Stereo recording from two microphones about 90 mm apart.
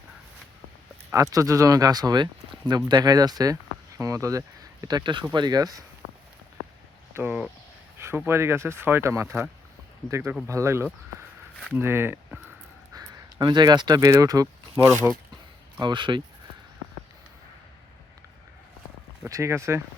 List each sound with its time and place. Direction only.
1.1 s speech: 40° right (ahead or behind)
7.1 s speech: 25° right (ahead or behind)
12.9 s a sound: 45° right (ahead or behind)
14.1 s speech: 40° right (ahead or behind)
14.8 s speech: 25° right (ahead or behind)
15.8 s speech: 60° right (ahead or behind)
19.2 s speech: 30° right (ahead or behind)